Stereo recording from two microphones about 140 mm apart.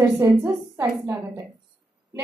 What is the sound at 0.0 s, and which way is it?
A woman's voice, 15° right (ahead or behind).